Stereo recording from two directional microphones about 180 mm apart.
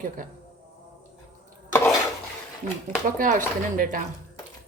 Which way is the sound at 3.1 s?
50° right (ahead or behind).